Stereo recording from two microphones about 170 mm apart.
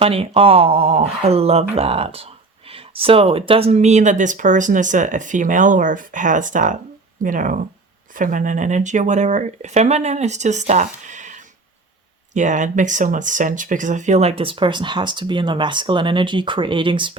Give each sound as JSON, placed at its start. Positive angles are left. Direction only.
{"t": 0.0, "sound": "speech", "side_deg": -35}